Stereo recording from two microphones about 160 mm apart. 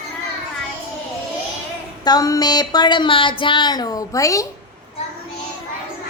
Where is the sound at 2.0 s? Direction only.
25° left (ahead or behind).